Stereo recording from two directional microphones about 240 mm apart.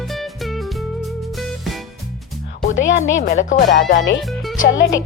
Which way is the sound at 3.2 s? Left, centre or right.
Left.